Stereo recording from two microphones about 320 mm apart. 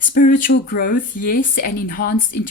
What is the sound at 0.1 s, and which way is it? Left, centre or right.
A woman's voice, left.